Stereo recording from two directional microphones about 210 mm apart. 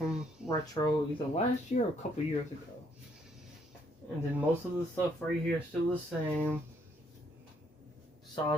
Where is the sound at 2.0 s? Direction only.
35° left (ahead or behind).